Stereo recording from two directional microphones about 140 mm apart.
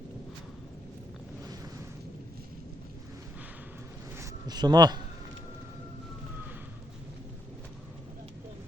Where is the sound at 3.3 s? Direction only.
10° right (ahead or behind); by 5.0 s 30° right (ahead or behind).